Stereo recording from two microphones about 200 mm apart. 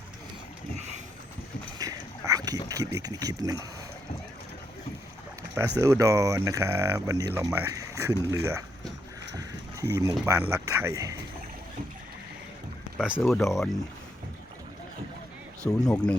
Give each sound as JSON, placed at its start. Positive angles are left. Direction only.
{"t": 0.8, "sound": "vehicle", "side_deg": -35}
{"t": 1.8, "sound": "boat", "side_deg": -20}
{"t": 2.6, "sound": "speech", "side_deg": -15}
{"t": 5.4, "sound": "speech", "side_deg": -15}
{"t": 9.3, "sound": "a sound", "side_deg": -15}
{"t": 10.5, "sound": "speech", "side_deg": -15}
{"t": 13.0, "sound": "speech", "side_deg": -5}
{"t": 15.6, "sound": "speech", "side_deg": 5}